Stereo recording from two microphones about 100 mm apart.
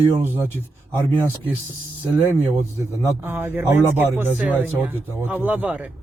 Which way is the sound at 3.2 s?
20° right (ahead or behind).